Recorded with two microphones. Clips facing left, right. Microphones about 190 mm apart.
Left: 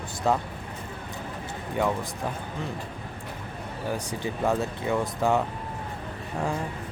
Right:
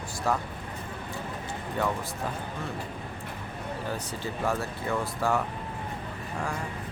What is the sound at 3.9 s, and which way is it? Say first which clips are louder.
Speech: left 7 dB; 20° left (ahead or behind).